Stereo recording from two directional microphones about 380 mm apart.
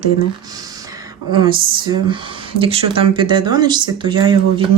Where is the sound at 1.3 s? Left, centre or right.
Centre.